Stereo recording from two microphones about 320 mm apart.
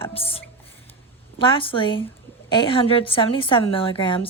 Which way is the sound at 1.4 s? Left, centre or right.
Centre.